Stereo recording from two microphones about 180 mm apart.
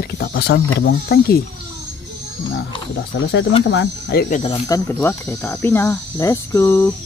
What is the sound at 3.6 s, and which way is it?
Speech, 80° left.